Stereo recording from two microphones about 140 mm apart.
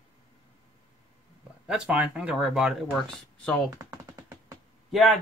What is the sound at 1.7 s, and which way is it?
Speech, 5° right (ahead or behind).